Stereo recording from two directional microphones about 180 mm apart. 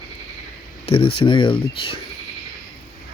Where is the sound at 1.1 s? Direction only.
25° left (ahead or behind).